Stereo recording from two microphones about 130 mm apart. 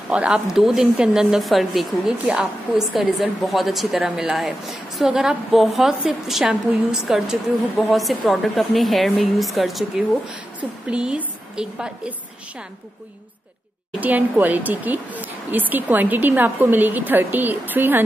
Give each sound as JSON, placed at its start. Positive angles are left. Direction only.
{"t": 0.1, "sound": "a woman's voice", "side_deg": -5}
{"t": 13.9, "sound": "speech", "side_deg": -10}